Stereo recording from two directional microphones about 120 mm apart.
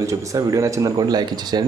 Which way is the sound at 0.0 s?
30° right (ahead or behind).